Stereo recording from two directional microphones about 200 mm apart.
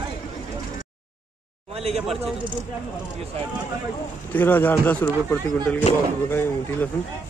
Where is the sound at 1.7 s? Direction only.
30° right (ahead or behind).